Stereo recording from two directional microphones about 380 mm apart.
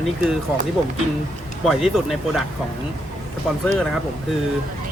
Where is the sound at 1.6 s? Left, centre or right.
Centre.